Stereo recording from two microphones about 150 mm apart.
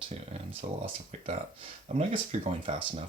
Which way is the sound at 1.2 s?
40° right (ahead or behind).